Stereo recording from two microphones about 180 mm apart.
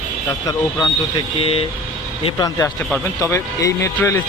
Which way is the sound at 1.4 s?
30° left (ahead or behind).